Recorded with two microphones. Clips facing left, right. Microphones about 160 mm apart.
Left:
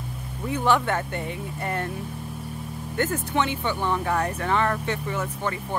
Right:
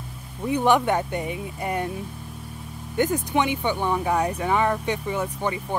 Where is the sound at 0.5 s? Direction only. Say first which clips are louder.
Right 3 dB; 15° right (ahead or behind).